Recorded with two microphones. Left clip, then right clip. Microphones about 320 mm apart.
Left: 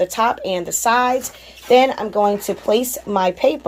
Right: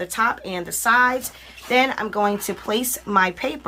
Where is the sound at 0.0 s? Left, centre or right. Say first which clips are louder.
Left 4 dB; centre.